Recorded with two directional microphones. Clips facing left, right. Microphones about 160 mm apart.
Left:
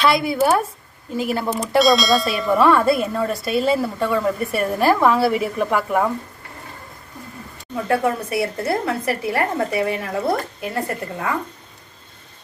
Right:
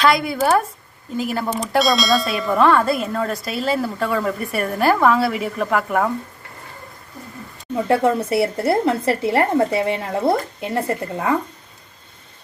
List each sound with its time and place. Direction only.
0.0 s speech: centre (ahead or behind)
7.9 s a woman's voice: 25° right (ahead or behind)